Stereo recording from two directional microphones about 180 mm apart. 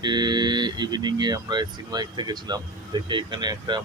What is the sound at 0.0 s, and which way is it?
Speech, 25° right (ahead or behind).